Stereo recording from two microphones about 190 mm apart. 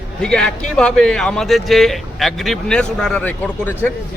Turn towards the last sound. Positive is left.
turn(degrees=10)  # may be behind; listen again after turning